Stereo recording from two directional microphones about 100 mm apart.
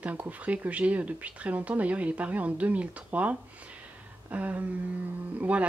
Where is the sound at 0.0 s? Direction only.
15° right (ahead or behind).